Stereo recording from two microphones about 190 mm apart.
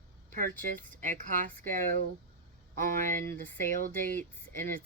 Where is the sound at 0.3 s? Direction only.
45° right (ahead or behind).